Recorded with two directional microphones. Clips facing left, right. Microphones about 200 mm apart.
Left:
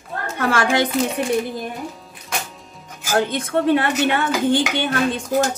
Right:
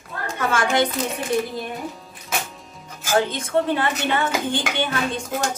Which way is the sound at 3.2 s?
60° left (ahead or behind).